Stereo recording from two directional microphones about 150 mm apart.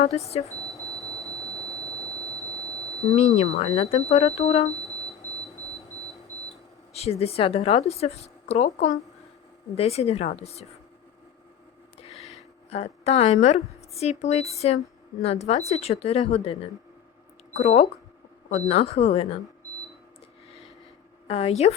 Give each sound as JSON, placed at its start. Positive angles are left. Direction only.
{"t": 0.0, "sound": "a woman's voice", "side_deg": 45}
{"t": 2.3, "sound": "vehicle", "side_deg": -20}
{"t": 2.6, "sound": "a sound", "side_deg": 0}
{"t": 3.2, "sound": "a woman's voice", "side_deg": 45}
{"t": 6.9, "sound": "a woman's voice", "side_deg": 45}
{"t": 12.1, "sound": "a sound", "side_deg": 0}
{"t": 12.7, "sound": "a woman's voice", "side_deg": 45}
{"t": 21.2, "sound": "a woman's voice", "side_deg": 40}